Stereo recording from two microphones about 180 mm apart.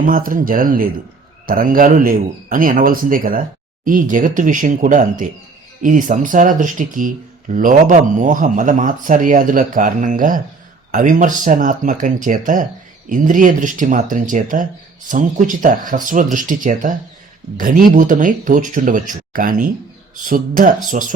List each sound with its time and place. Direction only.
0.0 s speech: 50° right (ahead or behind)